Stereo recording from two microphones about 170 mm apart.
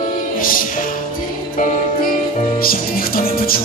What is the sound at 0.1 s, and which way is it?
Music, 55° left (ahead or behind).